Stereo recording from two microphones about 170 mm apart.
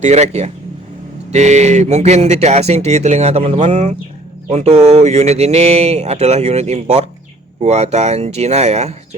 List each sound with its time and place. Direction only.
0.0 s speech: 40° right (ahead or behind)